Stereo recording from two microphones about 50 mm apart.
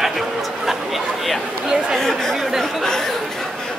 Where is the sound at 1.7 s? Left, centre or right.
Centre.